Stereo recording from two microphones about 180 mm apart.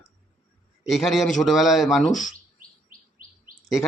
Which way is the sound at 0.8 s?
Centre (ahead or behind).